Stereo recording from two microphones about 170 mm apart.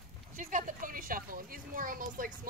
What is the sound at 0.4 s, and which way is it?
A woman's voice, 50° right (ahead or behind).